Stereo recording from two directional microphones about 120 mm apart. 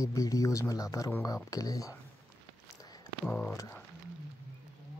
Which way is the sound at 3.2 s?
10° left (ahead or behind).